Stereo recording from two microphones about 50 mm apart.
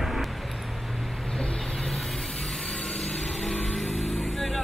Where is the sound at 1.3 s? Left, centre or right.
Centre.